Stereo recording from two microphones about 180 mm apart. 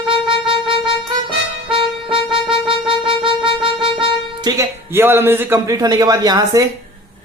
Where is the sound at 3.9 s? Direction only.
30° right (ahead or behind).